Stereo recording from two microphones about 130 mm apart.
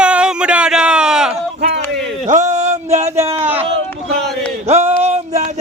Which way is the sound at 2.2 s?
75° right (ahead or behind).